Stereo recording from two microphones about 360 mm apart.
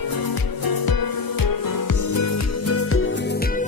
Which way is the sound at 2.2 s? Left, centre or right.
Left.